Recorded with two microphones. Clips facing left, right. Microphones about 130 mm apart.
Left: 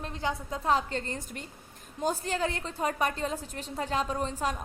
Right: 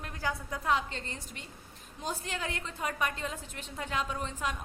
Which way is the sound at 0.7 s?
40° left (ahead or behind).